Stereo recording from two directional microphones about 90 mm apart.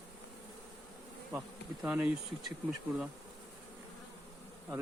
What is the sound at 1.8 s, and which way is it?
Bee, 15° right (ahead or behind).